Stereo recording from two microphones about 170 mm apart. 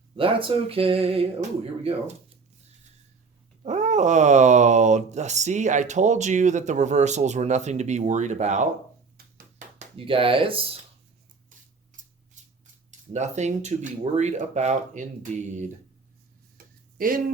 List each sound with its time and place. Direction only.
0.2 s speech: 30° right (ahead or behind)
3.6 s speech: 45° right (ahead or behind)
9.7 s speech: 30° right (ahead or behind)
12.0 s scissors: 50° right (ahead or behind)
12.4 s a sound: 45° right (ahead or behind)
13.1 s speech: 40° right (ahead or behind)
17.0 s speech: 55° right (ahead or behind)